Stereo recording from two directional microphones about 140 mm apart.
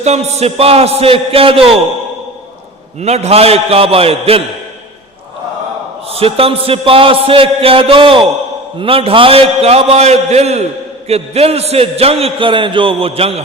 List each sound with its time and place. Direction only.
0.0 s a man's voice: 50° right (ahead or behind)
3.0 s a man's voice: 50° right (ahead or behind)
6.1 s a man's voice: 45° right (ahead or behind)